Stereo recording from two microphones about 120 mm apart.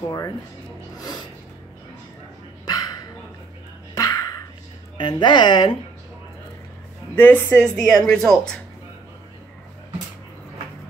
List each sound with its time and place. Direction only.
0.9 s snort: 35° left (ahead or behind)
2.6 s dog: 35° left (ahead or behind)
3.9 s a sound: 30° left (ahead or behind)
4.9 s speech: 40° left (ahead or behind)
7.2 s a woman's voice: 15° left (ahead or behind)
7.6 s speech: 5° left (ahead or behind)